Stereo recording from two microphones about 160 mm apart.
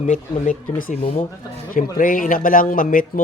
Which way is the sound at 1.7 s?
60° left (ahead or behind).